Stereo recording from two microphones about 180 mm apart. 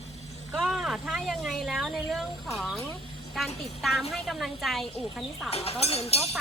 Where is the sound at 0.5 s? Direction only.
5° right (ahead or behind).